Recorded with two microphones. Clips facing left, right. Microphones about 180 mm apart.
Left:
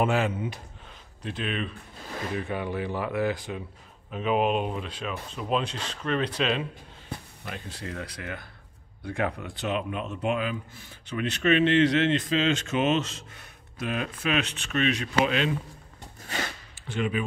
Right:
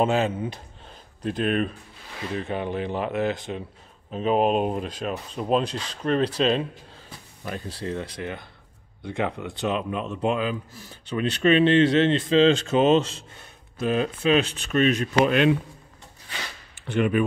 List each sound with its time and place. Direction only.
0.0 s speech: 25° right (ahead or behind)
1.2 s speech: 45° right (ahead or behind)
2.3 s speech: 25° right (ahead or behind)
4.1 s speech: 35° right (ahead or behind); by 15.5 s 55° right (ahead or behind)
16.8 s speech: 60° right (ahead or behind)